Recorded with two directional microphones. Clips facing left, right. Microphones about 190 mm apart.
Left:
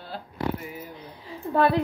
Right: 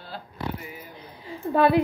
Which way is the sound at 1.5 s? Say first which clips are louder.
Right 2 dB; 10° right (ahead or behind).